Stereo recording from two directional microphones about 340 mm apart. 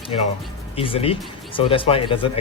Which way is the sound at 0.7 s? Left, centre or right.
Centre.